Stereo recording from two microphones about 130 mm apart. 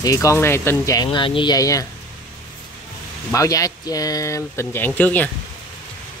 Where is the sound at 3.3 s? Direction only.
25° left (ahead or behind).